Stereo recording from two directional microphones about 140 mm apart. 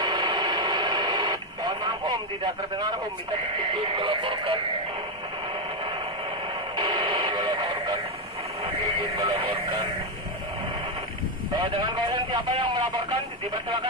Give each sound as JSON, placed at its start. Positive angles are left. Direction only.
{"t": 0.0, "sound": "radio", "side_deg": -30}
{"t": 3.7, "sound": "speech", "side_deg": -40}
{"t": 6.8, "sound": "radio", "side_deg": -35}
{"t": 9.2, "sound": "speech", "side_deg": -40}
{"t": 11.5, "sound": "a man's voice", "side_deg": -35}